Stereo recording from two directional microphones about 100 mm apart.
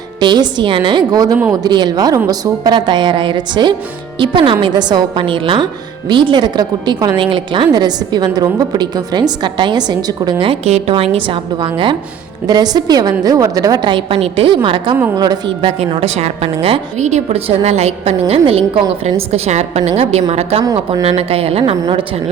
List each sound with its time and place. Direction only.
0.2 s a woman's voice: 45° right (ahead or behind)
2.7 s a woman's voice: 50° right (ahead or behind)
7.2 s a woman's voice: 55° right (ahead or behind)
10.5 s a woman's voice: 90° right; by 11.3 s 65° right (ahead or behind)
11.5 s a woman's voice: 50° right (ahead or behind)
14.2 s a woman's voice: 60° right (ahead or behind)
15.1 s a woman's voice: 40° right (ahead or behind)
15.8 s a woman's voice: 90° right
17.3 s a woman's voice: 90° right
21.0 s speech: 75° right (ahead or behind)